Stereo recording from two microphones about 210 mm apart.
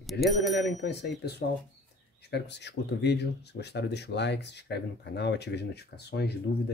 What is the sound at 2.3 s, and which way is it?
Speech, 55° left (ahead or behind).